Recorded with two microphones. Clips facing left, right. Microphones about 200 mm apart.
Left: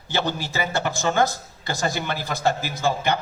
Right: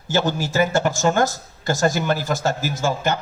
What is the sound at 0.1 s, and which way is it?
Speech, 45° right (ahead or behind).